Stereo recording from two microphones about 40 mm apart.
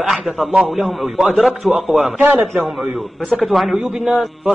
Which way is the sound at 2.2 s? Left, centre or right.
Right.